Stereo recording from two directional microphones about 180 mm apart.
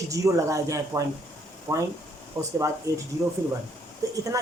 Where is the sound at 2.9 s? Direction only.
20° right (ahead or behind).